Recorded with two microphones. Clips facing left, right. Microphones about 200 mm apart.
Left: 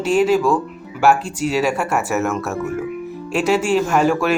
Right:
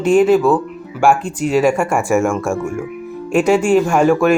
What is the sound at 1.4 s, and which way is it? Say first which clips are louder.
Speech: right 5 dB; 5° left (ahead or behind).